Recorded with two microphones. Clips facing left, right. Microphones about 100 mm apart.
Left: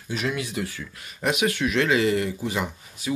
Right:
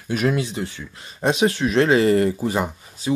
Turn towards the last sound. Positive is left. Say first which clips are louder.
# right 5 dB
turn(degrees=-40)  # may be behind; listen again after turning